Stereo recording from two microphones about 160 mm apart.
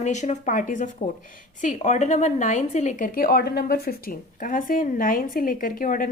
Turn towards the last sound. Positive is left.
turn(degrees=60)  # may be behind; listen again after turning